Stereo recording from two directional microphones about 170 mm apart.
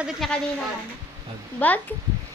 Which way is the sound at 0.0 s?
Centre (ahead or behind).